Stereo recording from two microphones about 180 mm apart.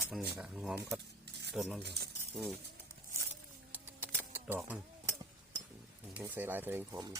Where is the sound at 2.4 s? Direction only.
Centre (ahead or behind).